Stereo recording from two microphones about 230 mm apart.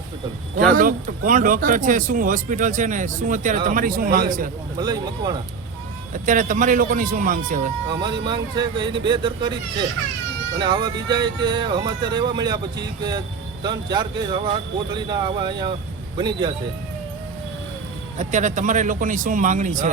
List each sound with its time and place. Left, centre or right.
0.8 s speech: right
4.8 s speech: centre
6.1 s speech: right
8.2 s speech: centre
10.6 s speech: centre
18.2 s speech: right